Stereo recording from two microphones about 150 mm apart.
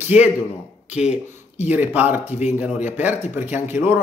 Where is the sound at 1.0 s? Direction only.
45° left (ahead or behind).